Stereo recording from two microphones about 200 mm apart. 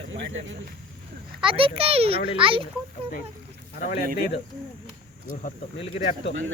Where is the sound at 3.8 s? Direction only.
45° left (ahead or behind).